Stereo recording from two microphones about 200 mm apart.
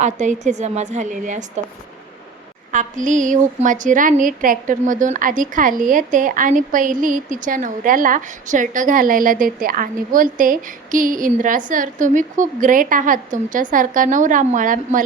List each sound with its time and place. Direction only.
0.0 s a woman's voice: 35° right (ahead or behind)
2.7 s a woman's voice: 40° right (ahead or behind)